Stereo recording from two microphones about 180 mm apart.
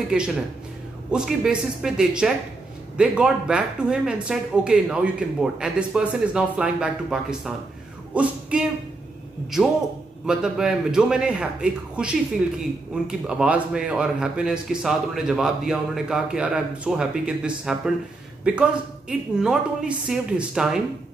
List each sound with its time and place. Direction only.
0.1 s speech: 5° right (ahead or behind)
10.2 s speech: 5° right (ahead or behind)